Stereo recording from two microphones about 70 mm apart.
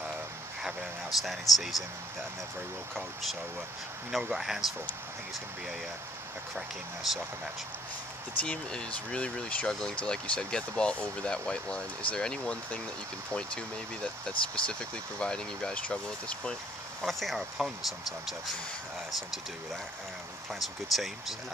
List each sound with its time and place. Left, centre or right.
1.2 s speech: centre
4.1 s speech: centre
6.5 s speech: centre
8.4 s speech: centre
17.0 s speech: centre
20.5 s speech: centre